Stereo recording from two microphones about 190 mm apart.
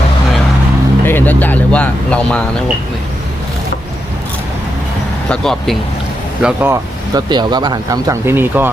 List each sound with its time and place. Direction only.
1.0 s speech: 10° left (ahead or behind)
5.3 s speech: centre (ahead or behind)
6.4 s speech: 10° right (ahead or behind)
7.1 s speech: 20° right (ahead or behind)